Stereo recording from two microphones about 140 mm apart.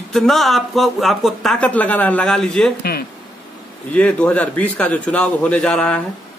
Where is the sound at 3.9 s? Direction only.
10° left (ahead or behind).